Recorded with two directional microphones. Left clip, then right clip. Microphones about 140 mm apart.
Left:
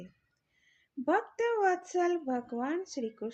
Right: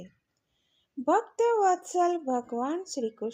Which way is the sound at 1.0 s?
40° right (ahead or behind).